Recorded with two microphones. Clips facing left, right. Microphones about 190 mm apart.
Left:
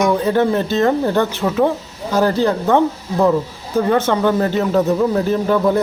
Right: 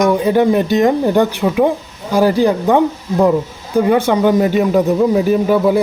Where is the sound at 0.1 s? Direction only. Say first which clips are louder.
Right 3 dB; 15° right (ahead or behind).